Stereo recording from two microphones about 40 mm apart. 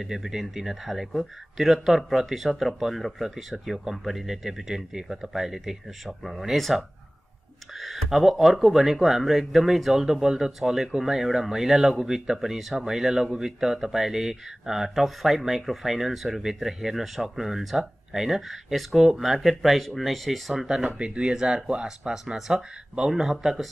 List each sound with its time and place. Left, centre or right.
0.0 s speech: centre
20.6 s speech: centre
21.0 s speech: right; by 23.7 s centre